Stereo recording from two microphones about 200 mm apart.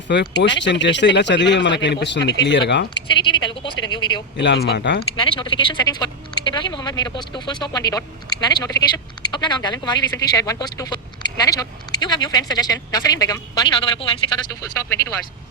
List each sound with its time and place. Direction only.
0.1 s speech: 60° left (ahead or behind)
3.1 s speech: 25° left (ahead or behind)
4.4 s speech: 60° left (ahead or behind)
5.1 s speech: 25° left (ahead or behind)